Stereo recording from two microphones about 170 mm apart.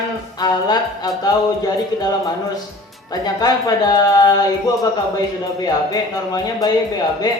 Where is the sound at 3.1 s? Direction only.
20° left (ahead or behind).